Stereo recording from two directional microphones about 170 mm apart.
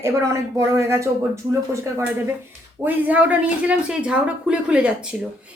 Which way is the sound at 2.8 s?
10° right (ahead or behind).